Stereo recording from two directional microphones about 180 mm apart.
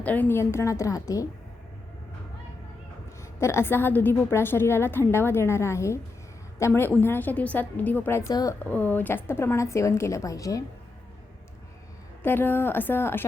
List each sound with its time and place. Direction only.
0.0 s a woman's voice: 10° left (ahead or behind)
3.4 s a woman's voice: 15° left (ahead or behind)
12.2 s a woman's voice: 10° left (ahead or behind)